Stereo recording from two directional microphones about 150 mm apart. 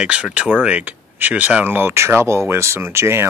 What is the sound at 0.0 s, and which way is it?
Speech, 5° right (ahead or behind).